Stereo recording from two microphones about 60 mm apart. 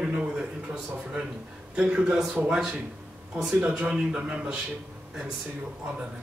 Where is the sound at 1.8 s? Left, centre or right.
Centre.